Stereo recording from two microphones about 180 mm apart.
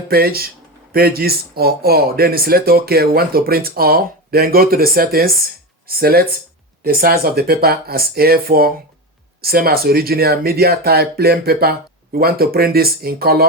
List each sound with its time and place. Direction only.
0.1 s speech: 55° right (ahead or behind)